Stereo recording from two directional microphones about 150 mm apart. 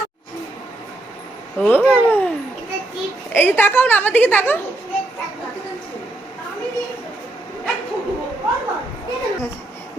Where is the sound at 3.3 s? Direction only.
15° left (ahead or behind).